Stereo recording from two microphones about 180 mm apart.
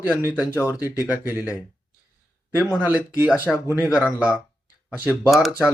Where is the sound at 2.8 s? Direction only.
10° right (ahead or behind).